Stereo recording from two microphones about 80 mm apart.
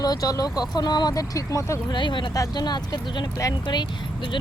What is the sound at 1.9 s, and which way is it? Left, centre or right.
Speech, left.